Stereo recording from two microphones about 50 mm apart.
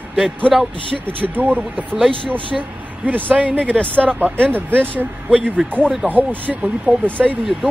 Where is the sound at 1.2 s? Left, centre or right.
Right.